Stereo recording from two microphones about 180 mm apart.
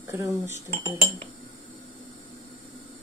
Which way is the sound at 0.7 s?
35° right (ahead or behind).